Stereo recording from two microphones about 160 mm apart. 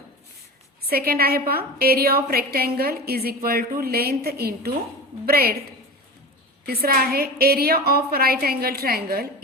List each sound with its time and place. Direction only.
0.9 s a woman's voice: 70° right (ahead or behind)
6.7 s a woman's voice: 70° right (ahead or behind)